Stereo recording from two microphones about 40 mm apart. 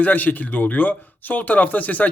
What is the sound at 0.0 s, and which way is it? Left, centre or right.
Speech, left.